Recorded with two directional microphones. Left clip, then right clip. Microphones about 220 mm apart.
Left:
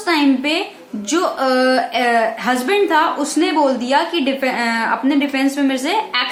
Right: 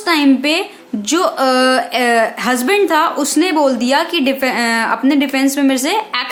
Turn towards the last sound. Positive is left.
turn(degrees=-50)  # may be behind; listen again after turning